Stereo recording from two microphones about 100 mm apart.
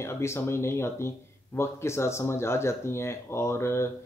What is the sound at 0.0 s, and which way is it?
Speech, 25° left (ahead or behind).